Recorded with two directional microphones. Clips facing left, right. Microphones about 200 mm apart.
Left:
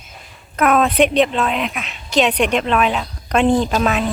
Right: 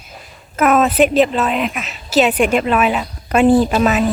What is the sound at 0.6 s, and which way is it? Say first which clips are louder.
A woman's voice: right 2 dB; 5° right (ahead or behind).